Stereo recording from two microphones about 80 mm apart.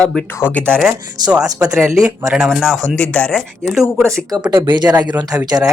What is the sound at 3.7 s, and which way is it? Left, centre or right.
Speech, centre.